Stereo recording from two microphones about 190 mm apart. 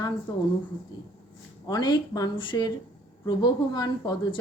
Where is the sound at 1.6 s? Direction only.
20° left (ahead or behind).